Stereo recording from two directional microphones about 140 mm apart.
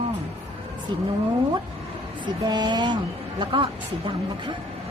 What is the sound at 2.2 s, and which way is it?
Speech, 30° right (ahead or behind).